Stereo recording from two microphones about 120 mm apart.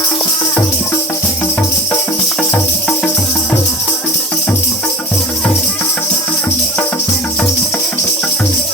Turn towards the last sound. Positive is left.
turn(degrees=15)  # may be behind; listen again after turning